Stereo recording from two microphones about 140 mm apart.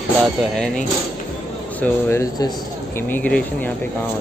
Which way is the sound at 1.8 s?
20° left (ahead or behind).